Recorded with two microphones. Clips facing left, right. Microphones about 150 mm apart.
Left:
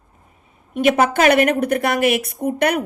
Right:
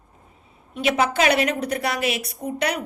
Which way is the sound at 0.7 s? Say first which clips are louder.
Left 5 dB; 50° left (ahead or behind).